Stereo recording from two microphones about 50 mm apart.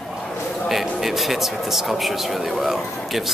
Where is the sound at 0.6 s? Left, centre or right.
Centre.